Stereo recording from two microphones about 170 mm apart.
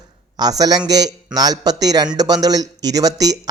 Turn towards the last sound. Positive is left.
turn(degrees=-20)  # may be behind; listen again after turning